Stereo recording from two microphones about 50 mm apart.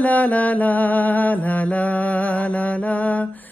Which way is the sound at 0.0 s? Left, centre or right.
Left.